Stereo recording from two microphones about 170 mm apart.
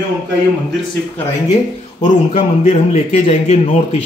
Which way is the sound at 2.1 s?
45° left (ahead or behind).